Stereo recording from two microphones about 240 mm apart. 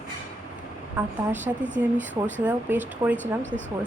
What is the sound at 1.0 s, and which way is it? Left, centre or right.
Speech, centre.